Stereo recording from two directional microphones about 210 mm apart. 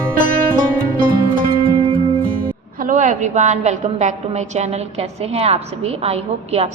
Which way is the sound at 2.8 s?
35° right (ahead or behind).